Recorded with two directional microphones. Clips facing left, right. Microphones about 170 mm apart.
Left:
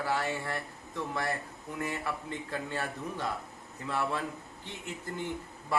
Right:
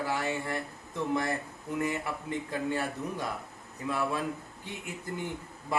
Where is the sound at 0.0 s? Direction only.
20° right (ahead or behind).